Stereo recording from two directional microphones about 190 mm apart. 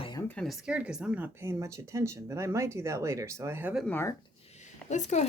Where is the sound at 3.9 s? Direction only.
10° left (ahead or behind).